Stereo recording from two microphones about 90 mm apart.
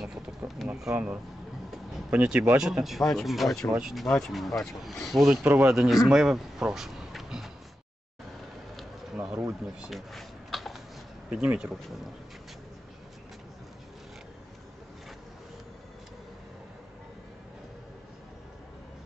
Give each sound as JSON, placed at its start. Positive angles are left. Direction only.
{"t": 0.4, "sound": "a sound", "side_deg": -20}
{"t": 0.9, "sound": "speech", "side_deg": -10}
{"t": 5.4, "sound": "speech", "side_deg": -20}
{"t": 5.7, "sound": "speech", "side_deg": -5}
{"t": 9.1, "sound": "a sound", "side_deg": -10}
{"t": 9.8, "sound": "typing", "side_deg": 0}
{"t": 11.2, "sound": "speech", "side_deg": -10}